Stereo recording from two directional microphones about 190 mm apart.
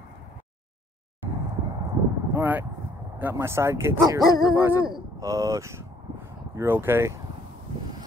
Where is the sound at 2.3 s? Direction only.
10° right (ahead or behind).